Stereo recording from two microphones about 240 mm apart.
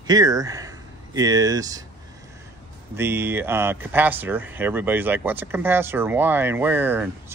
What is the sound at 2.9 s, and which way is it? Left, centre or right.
Speech, centre.